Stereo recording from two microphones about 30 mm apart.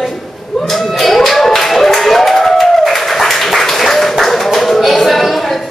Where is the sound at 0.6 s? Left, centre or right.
Centre.